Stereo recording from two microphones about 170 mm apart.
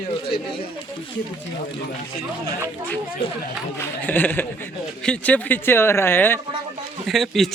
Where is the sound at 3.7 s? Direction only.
10° left (ahead or behind).